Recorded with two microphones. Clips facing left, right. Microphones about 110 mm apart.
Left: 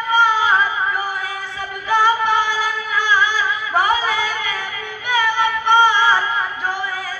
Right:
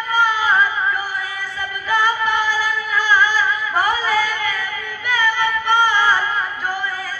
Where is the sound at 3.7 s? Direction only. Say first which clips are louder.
Left 1 dB; 20° left (ahead or behind).